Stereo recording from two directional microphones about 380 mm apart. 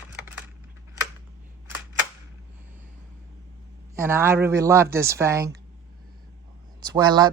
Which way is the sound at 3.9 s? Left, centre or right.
Centre.